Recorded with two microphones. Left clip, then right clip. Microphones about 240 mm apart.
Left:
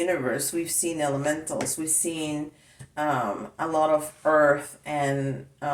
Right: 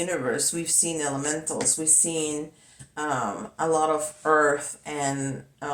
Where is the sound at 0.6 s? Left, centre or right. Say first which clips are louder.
Even; right.